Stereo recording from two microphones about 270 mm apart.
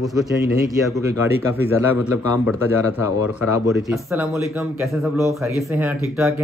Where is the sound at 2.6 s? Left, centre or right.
Left.